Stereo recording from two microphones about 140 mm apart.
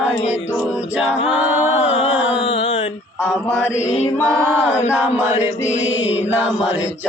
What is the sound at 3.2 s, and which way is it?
Mantra, 15° left (ahead or behind).